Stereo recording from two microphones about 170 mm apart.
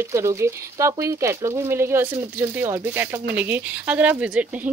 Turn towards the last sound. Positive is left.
turn(degrees=-10)  # may be behind; listen again after turning